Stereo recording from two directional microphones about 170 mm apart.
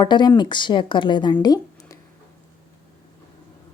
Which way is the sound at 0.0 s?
25° left (ahead or behind).